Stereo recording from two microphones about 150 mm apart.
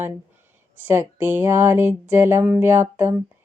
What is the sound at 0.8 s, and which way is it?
Speech, 15° right (ahead or behind).